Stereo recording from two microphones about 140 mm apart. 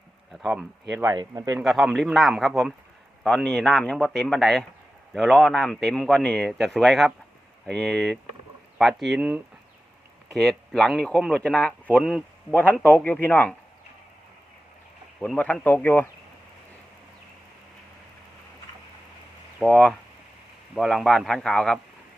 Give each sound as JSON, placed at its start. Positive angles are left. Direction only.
{"t": 0.3, "sound": "speech", "side_deg": 0}
{"t": 1.0, "sound": "speech", "side_deg": -25}
{"t": 1.6, "sound": "speech", "side_deg": 0}
{"t": 10.3, "sound": "speech", "side_deg": 5}
{"t": 15.4, "sound": "speech", "side_deg": 10}
{"t": 19.5, "sound": "speech", "side_deg": 0}